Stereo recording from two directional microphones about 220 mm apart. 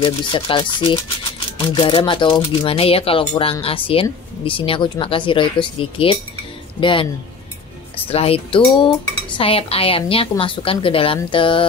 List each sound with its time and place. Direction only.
0.0 s speech: 20° left (ahead or behind)
8.1 s speech: 25° left (ahead or behind)